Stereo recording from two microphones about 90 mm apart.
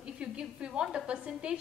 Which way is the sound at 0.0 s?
10° right (ahead or behind).